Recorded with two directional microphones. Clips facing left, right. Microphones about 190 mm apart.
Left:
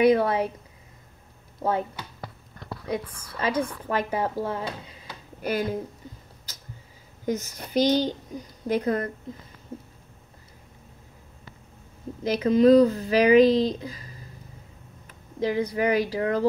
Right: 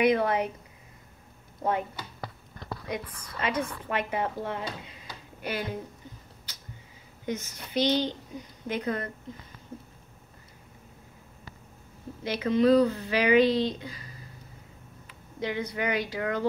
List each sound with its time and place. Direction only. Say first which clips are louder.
0.0 s speech: left 4 dB; 30° left (ahead or behind)
1.6 s speech: left 3 dB; 30° left (ahead or behind)
2.9 s speech: left 6 dB; 30° left (ahead or behind)
7.2 s speech: left 5 dB; 40° left (ahead or behind)
12.2 s speech: left 5 dB; 35° left (ahead or behind)
15.0 s speech: left 6 dB; 35° left (ahead or behind)